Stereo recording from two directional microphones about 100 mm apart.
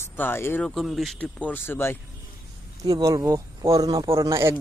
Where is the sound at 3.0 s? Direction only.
35° right (ahead or behind).